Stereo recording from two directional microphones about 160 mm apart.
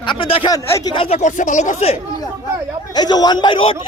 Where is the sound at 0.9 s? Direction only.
40° left (ahead or behind).